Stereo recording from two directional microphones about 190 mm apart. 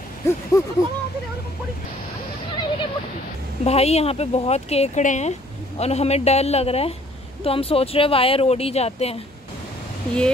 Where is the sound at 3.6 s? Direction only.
35° left (ahead or behind).